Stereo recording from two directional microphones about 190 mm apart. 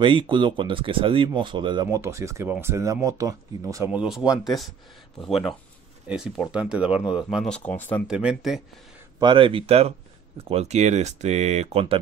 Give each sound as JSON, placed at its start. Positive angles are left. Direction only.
{"t": 0.0, "sound": "speech", "side_deg": -25}
{"t": 3.9, "sound": "speech", "side_deg": -5}
{"t": 8.1, "sound": "speech", "side_deg": -5}
{"t": 9.2, "sound": "speech", "side_deg": -25}